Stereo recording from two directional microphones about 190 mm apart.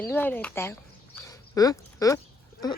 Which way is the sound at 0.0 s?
10° left (ahead or behind).